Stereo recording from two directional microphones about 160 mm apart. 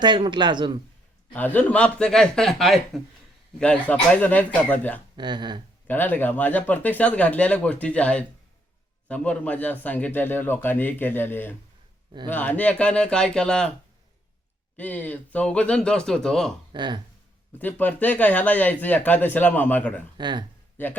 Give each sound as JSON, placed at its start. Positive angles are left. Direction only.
{"t": 0.0, "sound": "speech", "side_deg": -30}
{"t": 1.3, "sound": "a man's voice", "side_deg": 10}
{"t": 5.1, "sound": "speech", "side_deg": -30}
{"t": 5.9, "sound": "a man's voice", "side_deg": 10}
{"t": 14.8, "sound": "a man's voice", "side_deg": 10}
{"t": 16.7, "sound": "speech", "side_deg": -30}
{"t": 17.6, "sound": "a man's voice", "side_deg": 10}
{"t": 20.1, "sound": "speech", "side_deg": -25}
{"t": 20.8, "sound": "a man's voice", "side_deg": 10}